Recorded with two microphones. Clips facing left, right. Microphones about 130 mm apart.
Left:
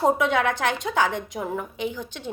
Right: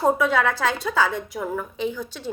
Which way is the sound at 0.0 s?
20° left (ahead or behind).